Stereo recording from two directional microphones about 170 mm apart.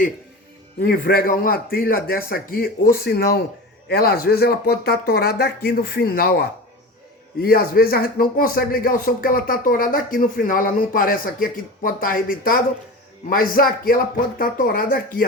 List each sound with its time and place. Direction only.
0.8 s speech: 60° left (ahead or behind)